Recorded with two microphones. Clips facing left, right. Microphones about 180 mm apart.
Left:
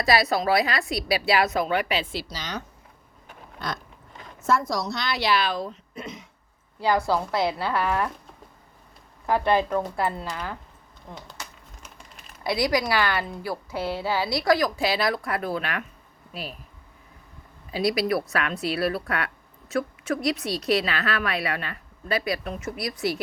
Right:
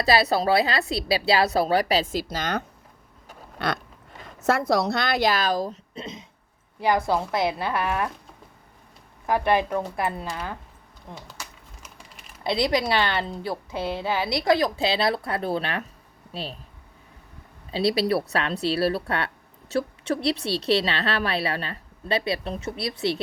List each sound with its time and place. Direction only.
0.0 s a woman's voice: 30° right (ahead or behind); by 2.6 s 55° right (ahead or behind)
3.6 s a sound: 70° right (ahead or behind)
4.4 s a woman's voice: 65° right (ahead or behind); by 5.8 s 40° right (ahead or behind)
5.9 s a sound: 25° right (ahead or behind)
6.7 s a woman's voice: 20° right (ahead or behind)
9.2 s a woman's voice: 15° right (ahead or behind)
12.4 s a woman's voice: 25° right (ahead or behind)
17.7 s a woman's voice: 30° right (ahead or behind)